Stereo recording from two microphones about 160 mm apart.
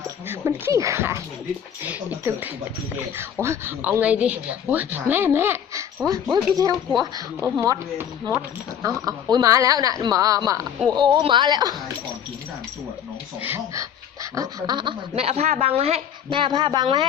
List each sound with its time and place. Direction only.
0.3 s a woman's voice: 15° right (ahead or behind)
13.4 s a woman's voice: 15° right (ahead or behind)
14.3 s a woman's voice: 25° right (ahead or behind)